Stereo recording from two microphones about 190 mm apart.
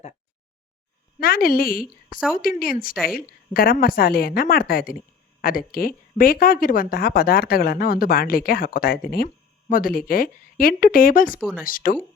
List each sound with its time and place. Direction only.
1.2 s a woman's voice: 50° left (ahead or behind)
11.3 s speech: 5° right (ahead or behind)
11.6 s a woman's voice: 45° left (ahead or behind)